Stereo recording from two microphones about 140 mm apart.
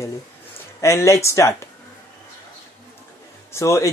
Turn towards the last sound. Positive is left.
turn(degrees=20)  # may be behind; listen again after turning